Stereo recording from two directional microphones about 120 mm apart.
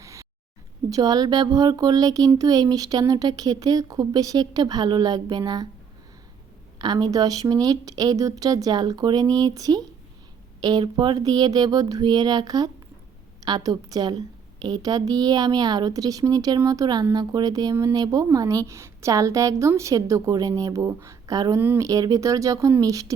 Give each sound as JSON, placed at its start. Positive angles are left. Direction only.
{"t": 0.0, "sound": "a sound", "side_deg": -25}
{"t": 0.9, "sound": "speech", "side_deg": -30}
{"t": 6.7, "sound": "speech", "side_deg": -35}
{"t": 21.6, "sound": "speech", "side_deg": -15}
{"t": 21.8, "sound": "speech", "side_deg": -30}